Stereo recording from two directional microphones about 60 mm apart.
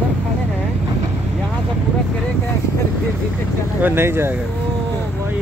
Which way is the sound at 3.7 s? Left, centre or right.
Right.